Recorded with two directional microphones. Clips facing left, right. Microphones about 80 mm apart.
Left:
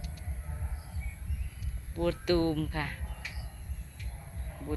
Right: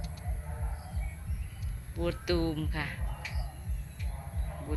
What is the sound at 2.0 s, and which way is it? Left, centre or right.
Speech, centre.